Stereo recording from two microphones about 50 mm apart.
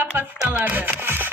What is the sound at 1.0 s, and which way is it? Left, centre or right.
Music, right.